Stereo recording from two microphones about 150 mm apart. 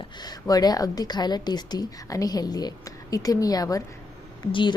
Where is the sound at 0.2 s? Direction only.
25° left (ahead or behind).